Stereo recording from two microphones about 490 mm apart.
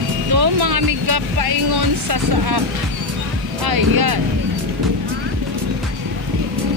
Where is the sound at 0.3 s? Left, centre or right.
Right.